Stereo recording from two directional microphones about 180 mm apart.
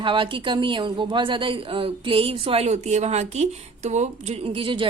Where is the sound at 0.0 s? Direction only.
30° right (ahead or behind).